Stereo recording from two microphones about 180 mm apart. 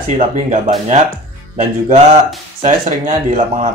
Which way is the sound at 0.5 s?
40° right (ahead or behind).